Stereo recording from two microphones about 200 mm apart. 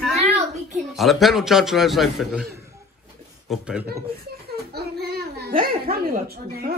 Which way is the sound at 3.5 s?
5° right (ahead or behind).